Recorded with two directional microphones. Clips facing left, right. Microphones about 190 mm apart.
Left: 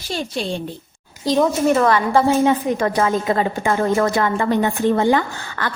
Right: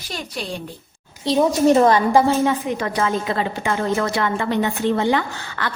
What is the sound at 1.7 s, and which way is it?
Speech, 25° right (ahead or behind).